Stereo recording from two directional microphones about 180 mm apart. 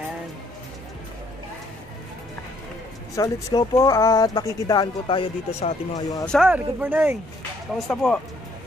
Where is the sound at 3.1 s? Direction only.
20° left (ahead or behind); by 5.7 s 35° left (ahead or behind).